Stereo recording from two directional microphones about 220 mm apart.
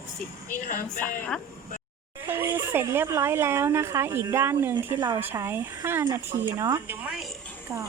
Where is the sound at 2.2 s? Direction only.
10° right (ahead or behind).